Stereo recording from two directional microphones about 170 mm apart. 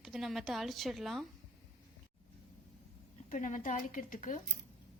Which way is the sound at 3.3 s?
45° left (ahead or behind).